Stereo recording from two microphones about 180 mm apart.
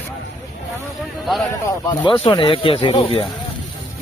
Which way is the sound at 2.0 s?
30° left (ahead or behind).